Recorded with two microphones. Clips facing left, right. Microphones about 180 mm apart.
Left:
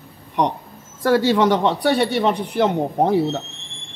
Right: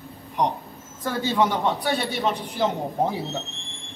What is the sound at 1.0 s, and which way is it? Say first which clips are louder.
A man's voice: left 7 dB; 75° left (ahead or behind).